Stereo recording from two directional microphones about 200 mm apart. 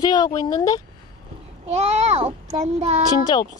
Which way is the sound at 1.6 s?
30° right (ahead or behind).